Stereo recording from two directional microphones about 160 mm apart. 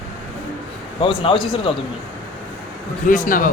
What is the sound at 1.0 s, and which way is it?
Speech, 30° left (ahead or behind).